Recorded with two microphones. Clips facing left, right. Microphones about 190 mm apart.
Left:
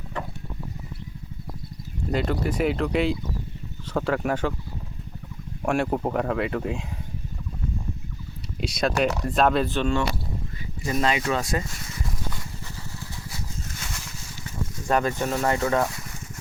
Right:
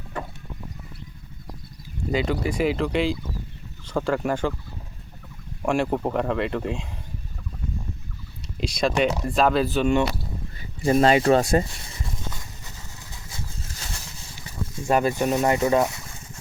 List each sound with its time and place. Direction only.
2.1 s speech: centre (ahead or behind)
5.6 s speech: 5° left (ahead or behind)
8.6 s speech: centre (ahead or behind)
10.8 s speech: 35° right (ahead or behind)
13.3 s vehicle: 35° right (ahead or behind)
14.8 s speech: 10° right (ahead or behind)